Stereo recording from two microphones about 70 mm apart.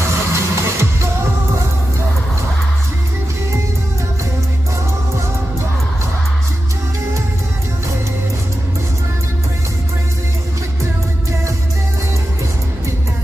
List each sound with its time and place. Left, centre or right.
0.0 s music: right